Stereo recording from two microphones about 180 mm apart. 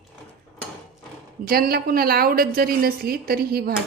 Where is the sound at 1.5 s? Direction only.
55° right (ahead or behind).